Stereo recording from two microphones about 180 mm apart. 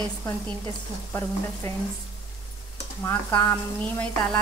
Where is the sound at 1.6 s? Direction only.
10° left (ahead or behind).